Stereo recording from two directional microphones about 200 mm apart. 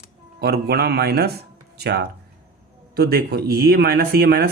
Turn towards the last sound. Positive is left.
turn(degrees=-50)  # may be behind; listen again after turning